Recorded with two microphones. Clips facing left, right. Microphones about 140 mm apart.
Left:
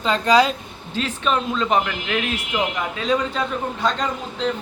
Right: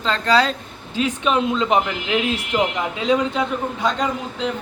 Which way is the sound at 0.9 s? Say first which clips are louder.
Right 3 dB; 15° right (ahead or behind).